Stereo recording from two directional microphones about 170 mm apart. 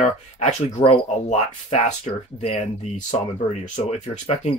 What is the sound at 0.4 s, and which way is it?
Speech, 45° left (ahead or behind).